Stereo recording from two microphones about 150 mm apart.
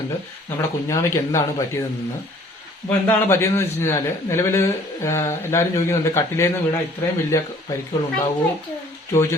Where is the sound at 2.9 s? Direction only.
10° left (ahead or behind).